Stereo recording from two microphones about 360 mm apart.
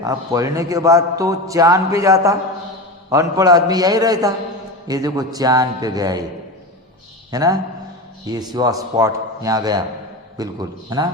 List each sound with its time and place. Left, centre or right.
0.0 s a man's voice: centre
7.3 s a man's voice: centre